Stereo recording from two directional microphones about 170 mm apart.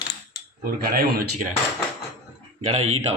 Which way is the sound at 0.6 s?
60° right (ahead or behind).